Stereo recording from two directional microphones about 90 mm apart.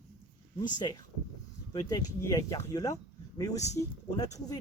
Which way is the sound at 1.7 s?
40° left (ahead or behind).